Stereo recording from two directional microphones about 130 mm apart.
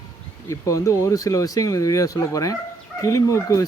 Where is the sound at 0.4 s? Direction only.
25° left (ahead or behind).